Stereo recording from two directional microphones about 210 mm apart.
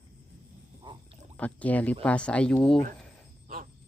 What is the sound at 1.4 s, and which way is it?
Speech, 5° left (ahead or behind).